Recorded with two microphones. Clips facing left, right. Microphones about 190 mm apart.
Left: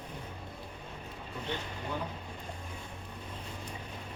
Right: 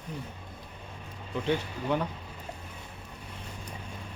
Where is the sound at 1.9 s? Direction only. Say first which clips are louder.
Right 9 dB; 75° right (ahead or behind).